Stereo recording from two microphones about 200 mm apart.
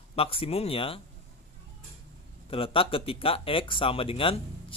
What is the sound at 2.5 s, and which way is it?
Speech, 25° left (ahead or behind).